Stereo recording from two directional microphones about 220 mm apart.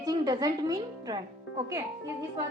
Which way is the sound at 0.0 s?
15° right (ahead or behind).